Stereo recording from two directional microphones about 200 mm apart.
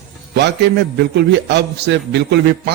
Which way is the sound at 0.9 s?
55° right (ahead or behind).